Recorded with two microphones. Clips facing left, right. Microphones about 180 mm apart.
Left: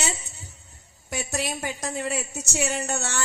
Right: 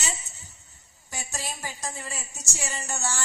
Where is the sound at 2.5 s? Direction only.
65° left (ahead or behind).